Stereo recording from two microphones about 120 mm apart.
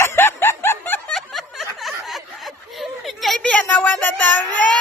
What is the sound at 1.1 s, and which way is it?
Snicker, centre (ahead or behind).